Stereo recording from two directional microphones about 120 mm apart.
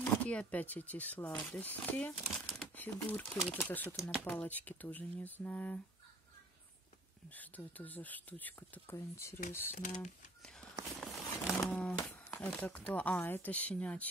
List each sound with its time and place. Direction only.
0.0 s speech: 10° left (ahead or behind)
2.3 s speech: 5° left (ahead or behind)
7.2 s speech: 15° left (ahead or behind)
9.8 s speech: 90° left
11.0 s a sound: centre (ahead or behind)
12.4 s speech: 10° left (ahead or behind)